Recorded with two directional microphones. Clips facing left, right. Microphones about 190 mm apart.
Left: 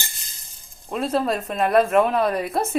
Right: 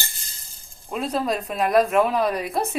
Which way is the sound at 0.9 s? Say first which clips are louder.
Left 2 dB; centre (ahead or behind).